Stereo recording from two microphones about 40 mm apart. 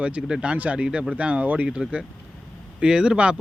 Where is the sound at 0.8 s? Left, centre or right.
Right.